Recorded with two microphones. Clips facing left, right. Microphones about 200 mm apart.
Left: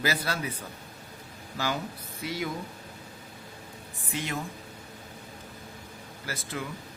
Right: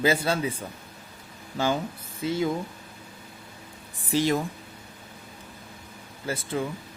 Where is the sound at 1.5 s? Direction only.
25° right (ahead or behind).